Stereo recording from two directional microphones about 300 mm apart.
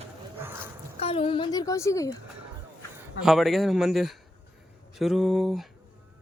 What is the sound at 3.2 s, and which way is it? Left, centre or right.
A man's voice, centre.